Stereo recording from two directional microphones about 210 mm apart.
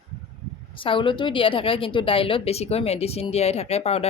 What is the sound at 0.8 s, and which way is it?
Speech, 25° left (ahead or behind).